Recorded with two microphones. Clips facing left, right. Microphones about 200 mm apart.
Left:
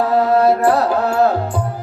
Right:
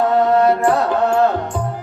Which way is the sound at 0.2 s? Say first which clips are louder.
Left 2 dB; 35° left (ahead or behind).